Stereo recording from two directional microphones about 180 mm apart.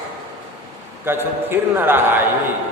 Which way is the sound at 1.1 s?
10° right (ahead or behind).